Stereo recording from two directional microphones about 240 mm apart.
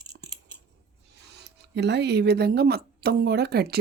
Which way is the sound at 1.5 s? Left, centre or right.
Right.